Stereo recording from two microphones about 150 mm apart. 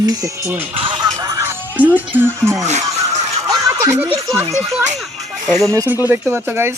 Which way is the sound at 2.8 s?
25° right (ahead or behind).